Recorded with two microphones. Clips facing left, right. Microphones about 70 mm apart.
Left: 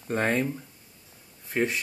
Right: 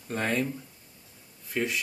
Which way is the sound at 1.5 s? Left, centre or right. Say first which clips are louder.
Left 3 dB; left.